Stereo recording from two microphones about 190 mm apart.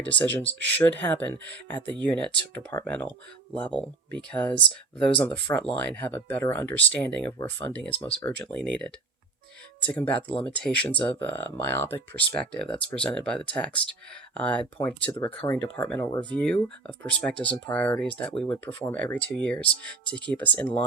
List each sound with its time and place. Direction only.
0.1 s speech: 10° left (ahead or behind)
7.9 s speech: 30° left (ahead or behind)
8.2 s speech: 5° left (ahead or behind)